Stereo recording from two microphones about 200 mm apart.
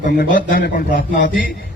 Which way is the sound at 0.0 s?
45° left (ahead or behind).